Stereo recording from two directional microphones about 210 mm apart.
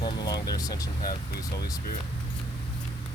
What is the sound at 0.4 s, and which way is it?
Speech, 20° left (ahead or behind).